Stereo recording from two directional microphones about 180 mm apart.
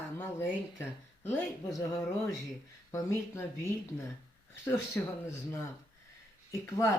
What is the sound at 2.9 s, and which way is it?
Speech, 15° left (ahead or behind).